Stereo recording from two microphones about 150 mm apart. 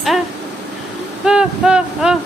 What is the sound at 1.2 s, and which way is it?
Speech, 5° right (ahead or behind).